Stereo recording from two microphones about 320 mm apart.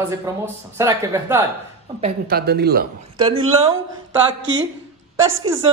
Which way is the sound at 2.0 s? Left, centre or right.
Right.